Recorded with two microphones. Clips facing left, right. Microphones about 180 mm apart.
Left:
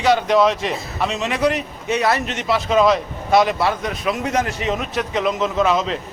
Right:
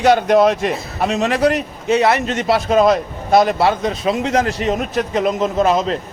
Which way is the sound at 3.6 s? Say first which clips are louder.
Right 5 dB; 25° right (ahead or behind).